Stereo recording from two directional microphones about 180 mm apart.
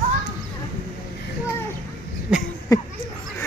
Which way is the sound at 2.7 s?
20° left (ahead or behind).